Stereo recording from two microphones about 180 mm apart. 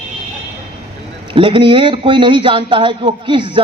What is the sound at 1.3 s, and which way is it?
A man's voice, 30° right (ahead or behind).